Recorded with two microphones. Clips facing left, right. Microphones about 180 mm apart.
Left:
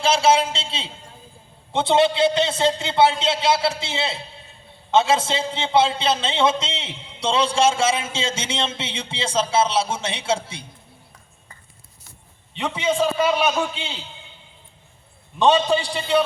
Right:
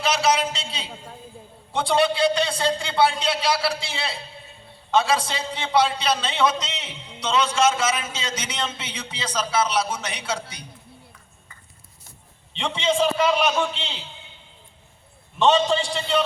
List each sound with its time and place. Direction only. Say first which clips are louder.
0.0 s a man's voice: left 4 dB; 25° left (ahead or behind)
12.5 s a man's voice: left 1 dB; 5° left (ahead or behind)
15.4 s a man's voice: left 1 dB; 15° left (ahead or behind)